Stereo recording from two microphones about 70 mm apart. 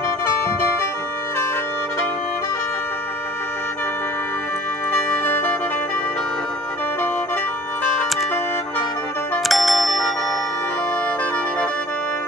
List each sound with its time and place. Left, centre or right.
0.4 s music: left
4.9 s music: left
9.5 s bicycle bell: centre